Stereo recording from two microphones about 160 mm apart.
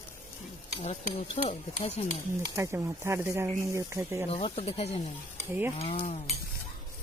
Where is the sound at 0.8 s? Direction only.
45° left (ahead or behind).